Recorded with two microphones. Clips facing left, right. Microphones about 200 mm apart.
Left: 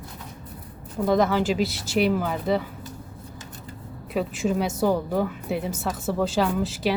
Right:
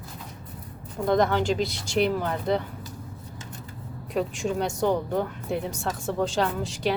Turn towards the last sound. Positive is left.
turn(degrees=5)  # may be behind; listen again after turning